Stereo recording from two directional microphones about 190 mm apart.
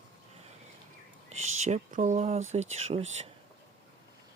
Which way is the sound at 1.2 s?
35° right (ahead or behind).